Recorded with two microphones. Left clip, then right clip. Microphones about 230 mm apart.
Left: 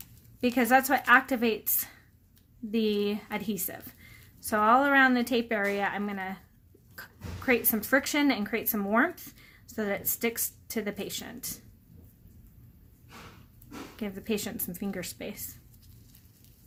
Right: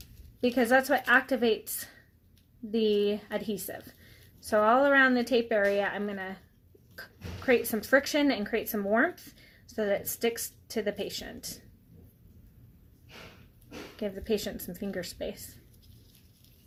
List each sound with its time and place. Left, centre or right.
0.4 s a woman's voice: left
2.8 s a woman's voice: left
7.5 s a woman's voice: left
14.5 s speech: left